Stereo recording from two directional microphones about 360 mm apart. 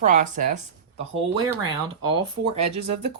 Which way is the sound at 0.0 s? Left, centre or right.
Right.